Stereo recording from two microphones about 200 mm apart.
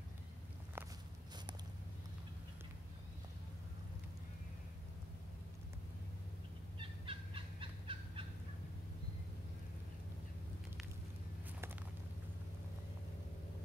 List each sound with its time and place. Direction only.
0.8 s walk: 10° right (ahead or behind)
6.8 s fowl: 25° right (ahead or behind)